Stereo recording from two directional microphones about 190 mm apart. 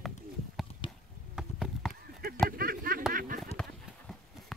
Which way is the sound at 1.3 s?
Centre (ahead or behind).